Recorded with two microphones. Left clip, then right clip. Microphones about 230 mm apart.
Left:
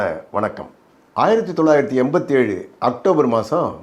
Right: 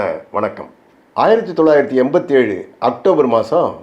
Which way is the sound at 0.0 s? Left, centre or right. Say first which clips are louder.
Right 2 dB; left.